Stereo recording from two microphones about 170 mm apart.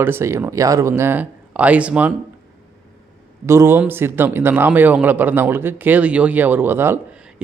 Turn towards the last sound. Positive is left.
turn(degrees=-15)  # may be behind; listen again after turning